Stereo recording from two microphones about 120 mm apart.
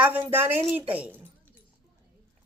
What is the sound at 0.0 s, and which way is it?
A woman's voice, 15° right (ahead or behind).